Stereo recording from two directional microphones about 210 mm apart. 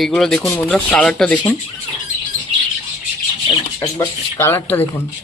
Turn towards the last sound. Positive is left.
turn(degrees=10)  # may be behind; listen again after turning